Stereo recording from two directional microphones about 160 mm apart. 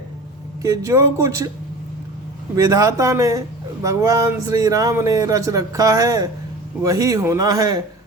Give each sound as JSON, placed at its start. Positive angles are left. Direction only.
{"t": 0.6, "sound": "a man's voice", "side_deg": -20}
{"t": 2.6, "sound": "a man's voice", "side_deg": -20}